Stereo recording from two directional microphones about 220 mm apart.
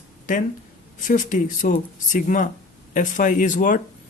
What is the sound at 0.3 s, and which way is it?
Speech, 35° left (ahead or behind).